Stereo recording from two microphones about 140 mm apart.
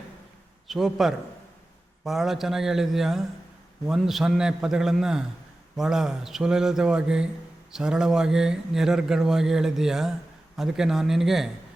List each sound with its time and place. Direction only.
0.7 s speech: centre (ahead or behind)